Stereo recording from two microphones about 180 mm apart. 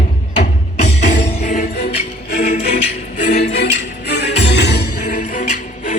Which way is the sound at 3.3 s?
70° left (ahead or behind).